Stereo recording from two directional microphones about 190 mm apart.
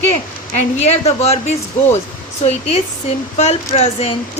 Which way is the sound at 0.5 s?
35° left (ahead or behind).